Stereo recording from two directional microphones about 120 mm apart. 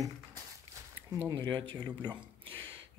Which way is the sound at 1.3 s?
35° right (ahead or behind).